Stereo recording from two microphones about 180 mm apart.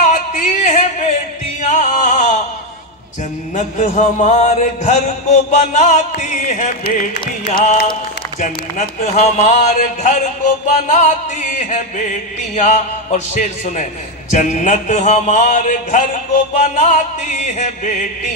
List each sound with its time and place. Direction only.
0.0 s music: 45° left (ahead or behind)
3.5 s music: 40° left (ahead or behind)
8.4 s speech: 40° left (ahead or behind)
9.8 s music: 45° left (ahead or behind)